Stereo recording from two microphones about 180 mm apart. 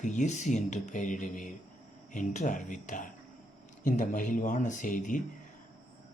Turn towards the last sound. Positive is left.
turn(degrees=45)  # may be behind; listen again after turning